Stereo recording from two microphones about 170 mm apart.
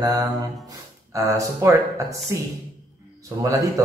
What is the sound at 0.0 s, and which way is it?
A man's voice, 20° right (ahead or behind).